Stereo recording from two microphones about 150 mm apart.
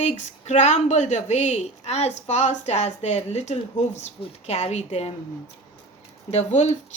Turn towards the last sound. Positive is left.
turn(degrees=50)  # may be behind; listen again after turning